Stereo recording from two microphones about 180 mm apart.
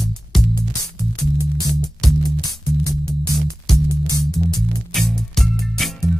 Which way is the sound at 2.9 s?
Centre (ahead or behind).